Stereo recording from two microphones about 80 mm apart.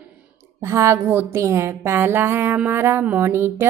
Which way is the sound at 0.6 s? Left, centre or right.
Right.